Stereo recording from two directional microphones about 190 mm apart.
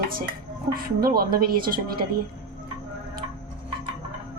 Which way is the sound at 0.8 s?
55° right (ahead or behind).